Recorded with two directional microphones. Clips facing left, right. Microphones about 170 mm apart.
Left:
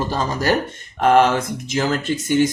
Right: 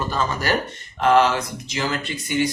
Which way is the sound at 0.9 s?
55° left (ahead or behind).